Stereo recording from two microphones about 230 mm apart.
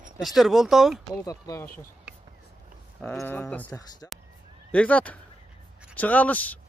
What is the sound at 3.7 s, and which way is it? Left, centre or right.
Speech, centre.